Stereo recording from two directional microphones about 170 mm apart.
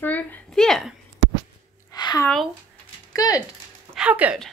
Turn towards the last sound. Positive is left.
turn(degrees=-10)  # may be behind; listen again after turning